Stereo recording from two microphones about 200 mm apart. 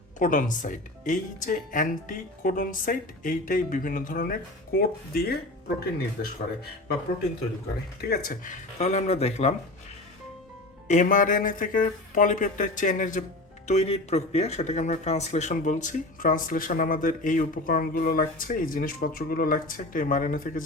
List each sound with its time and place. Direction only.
0.2 s speech: 40° left (ahead or behind)
8.0 s speech: 50° left (ahead or behind); by 9.6 s 30° left (ahead or behind)
10.8 s speech: 40° left (ahead or behind)